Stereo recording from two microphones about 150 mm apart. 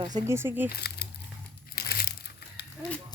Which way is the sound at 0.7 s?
90° left.